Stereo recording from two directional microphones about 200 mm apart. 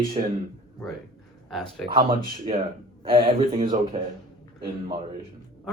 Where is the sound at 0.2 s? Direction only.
30° right (ahead or behind).